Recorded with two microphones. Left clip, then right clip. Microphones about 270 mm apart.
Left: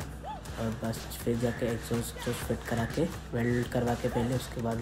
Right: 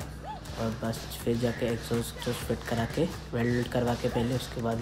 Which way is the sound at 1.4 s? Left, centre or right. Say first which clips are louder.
Right 2 dB; centre.